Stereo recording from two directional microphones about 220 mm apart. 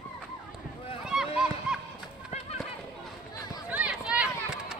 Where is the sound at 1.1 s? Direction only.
Centre (ahead or behind).